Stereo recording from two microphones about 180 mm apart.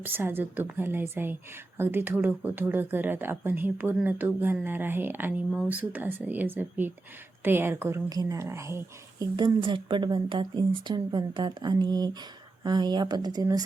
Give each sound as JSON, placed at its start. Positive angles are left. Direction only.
{"t": 0.0, "sound": "speech", "side_deg": -10}